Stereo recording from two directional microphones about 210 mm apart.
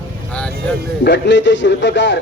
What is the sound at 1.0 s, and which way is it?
A man's voice, 55° left (ahead or behind).